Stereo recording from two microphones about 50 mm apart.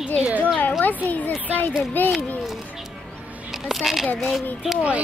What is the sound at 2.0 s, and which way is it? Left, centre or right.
Speech, left.